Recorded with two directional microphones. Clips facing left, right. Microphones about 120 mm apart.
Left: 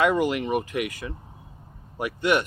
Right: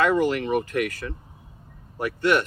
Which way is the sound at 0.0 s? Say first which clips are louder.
Right 1 dB; 15° left (ahead or behind).